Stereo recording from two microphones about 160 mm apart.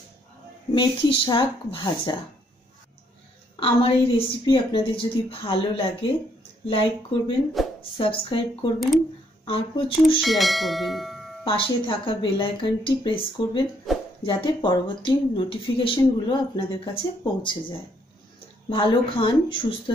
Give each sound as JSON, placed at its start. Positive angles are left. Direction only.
{"t": 0.7, "sound": "speech", "side_deg": 30}
{"t": 3.5, "sound": "speech", "side_deg": 35}
{"t": 7.6, "sound": "a sound", "side_deg": 0}
{"t": 8.0, "sound": "speech", "side_deg": 35}
{"t": 10.2, "sound": "speech", "side_deg": 0}
{"t": 11.4, "sound": "speech", "side_deg": 35}
{"t": 13.9, "sound": "a sound", "side_deg": 0}
{"t": 14.2, "sound": "speech", "side_deg": 30}